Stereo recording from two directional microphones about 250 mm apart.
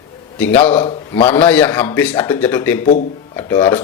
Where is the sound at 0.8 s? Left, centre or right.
Left.